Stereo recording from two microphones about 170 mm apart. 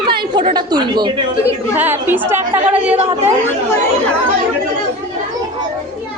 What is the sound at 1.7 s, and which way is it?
A woman's voice, 10° right (ahead or behind).